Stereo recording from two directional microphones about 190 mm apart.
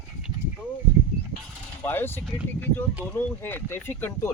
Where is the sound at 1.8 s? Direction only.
10° left (ahead or behind).